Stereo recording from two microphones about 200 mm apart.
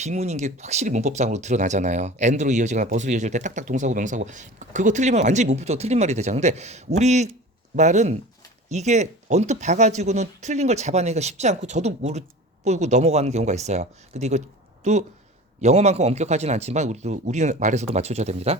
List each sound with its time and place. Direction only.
0.0 s speech: 35° right (ahead or behind)